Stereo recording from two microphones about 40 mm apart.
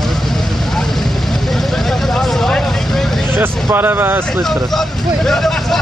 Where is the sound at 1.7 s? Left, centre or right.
Centre.